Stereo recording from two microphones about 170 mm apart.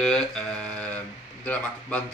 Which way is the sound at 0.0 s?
5° left (ahead or behind).